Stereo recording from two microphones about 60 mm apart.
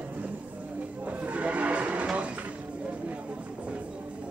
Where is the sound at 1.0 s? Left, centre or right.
Right.